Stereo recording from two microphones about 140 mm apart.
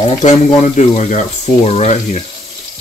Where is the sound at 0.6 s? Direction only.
55° left (ahead or behind).